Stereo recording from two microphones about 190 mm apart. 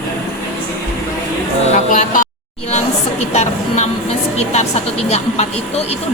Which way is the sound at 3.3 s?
35° left (ahead or behind).